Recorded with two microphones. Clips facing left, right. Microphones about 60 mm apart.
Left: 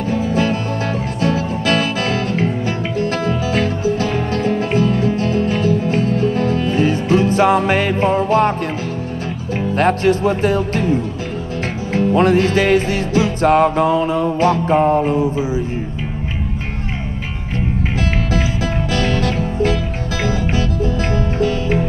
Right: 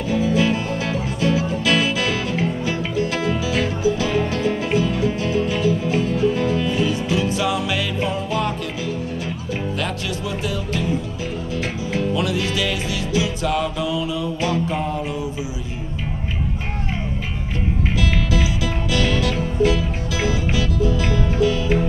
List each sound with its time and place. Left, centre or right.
0.1 s music: left
9.8 s music: left
17.9 s music: left